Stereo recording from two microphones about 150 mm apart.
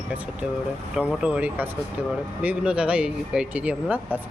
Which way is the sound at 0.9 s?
5° right (ahead or behind).